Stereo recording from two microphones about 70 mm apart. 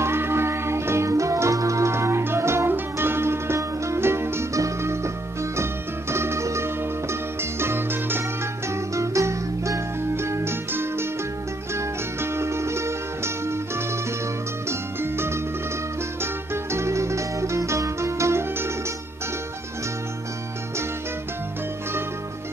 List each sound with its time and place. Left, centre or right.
0.0 s music: right
8.6 s music: right
16.7 s music: right